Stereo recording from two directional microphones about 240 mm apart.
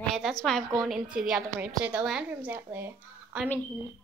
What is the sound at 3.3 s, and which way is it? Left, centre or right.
Speech, centre.